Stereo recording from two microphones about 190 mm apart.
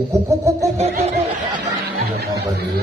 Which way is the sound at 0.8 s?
35° right (ahead or behind).